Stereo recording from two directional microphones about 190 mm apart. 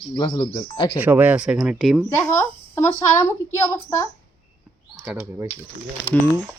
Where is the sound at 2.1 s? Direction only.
15° left (ahead or behind).